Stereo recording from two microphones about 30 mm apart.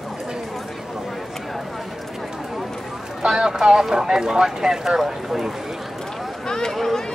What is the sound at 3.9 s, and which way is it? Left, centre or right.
Speech, right.